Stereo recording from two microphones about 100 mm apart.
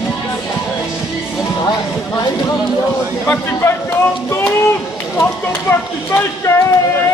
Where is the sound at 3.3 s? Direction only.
20° left (ahead or behind).